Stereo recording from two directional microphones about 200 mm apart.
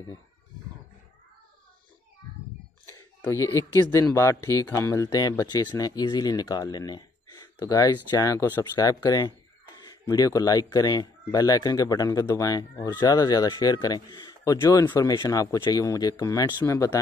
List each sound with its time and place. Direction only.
2.9 s speech: 15° left (ahead or behind)